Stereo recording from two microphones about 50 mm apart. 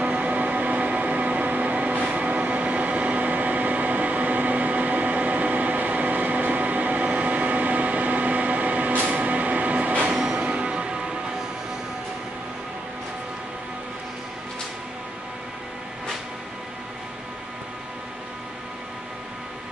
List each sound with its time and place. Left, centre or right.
0.0 s music: right